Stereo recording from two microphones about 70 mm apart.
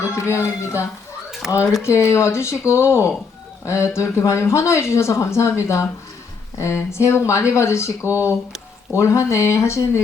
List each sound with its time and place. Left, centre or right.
0.0 s a sound: left
1.4 s speech: centre
1.8 s speech: left
8.0 s speech: right
8.9 s speech: left